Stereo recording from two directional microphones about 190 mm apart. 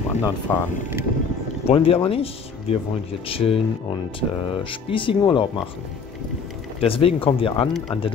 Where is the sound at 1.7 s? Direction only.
30° left (ahead or behind).